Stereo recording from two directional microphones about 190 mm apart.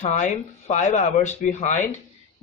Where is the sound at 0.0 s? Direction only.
40° left (ahead or behind).